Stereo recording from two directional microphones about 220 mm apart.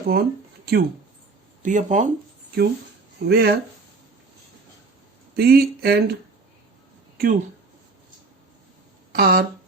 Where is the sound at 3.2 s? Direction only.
45° right (ahead or behind).